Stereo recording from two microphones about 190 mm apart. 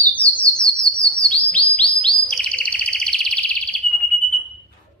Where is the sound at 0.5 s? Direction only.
5° left (ahead or behind).